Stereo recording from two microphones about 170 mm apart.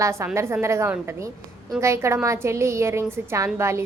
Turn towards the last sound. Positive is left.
turn(degrees=-15)  # may be behind; listen again after turning